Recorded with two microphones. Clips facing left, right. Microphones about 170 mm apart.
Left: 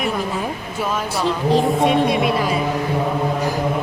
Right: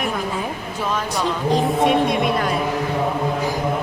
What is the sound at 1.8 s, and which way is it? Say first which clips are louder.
Speech: left 1 dB; centre (ahead or behind).